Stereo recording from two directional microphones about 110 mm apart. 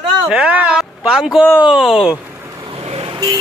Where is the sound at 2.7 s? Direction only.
60° right (ahead or behind).